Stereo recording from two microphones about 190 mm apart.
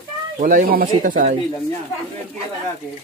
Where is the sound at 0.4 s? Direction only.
45° right (ahead or behind).